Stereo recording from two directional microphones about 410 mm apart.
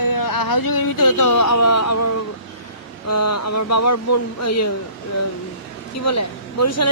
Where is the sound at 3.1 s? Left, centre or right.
Left.